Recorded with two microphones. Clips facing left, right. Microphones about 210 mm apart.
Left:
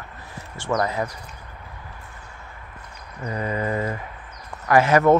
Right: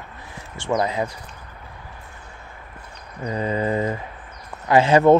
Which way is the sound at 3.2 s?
25° right (ahead or behind).